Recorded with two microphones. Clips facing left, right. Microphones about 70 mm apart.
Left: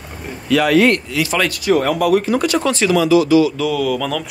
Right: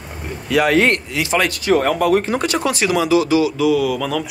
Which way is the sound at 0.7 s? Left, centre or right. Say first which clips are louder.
Left 2 dB; right.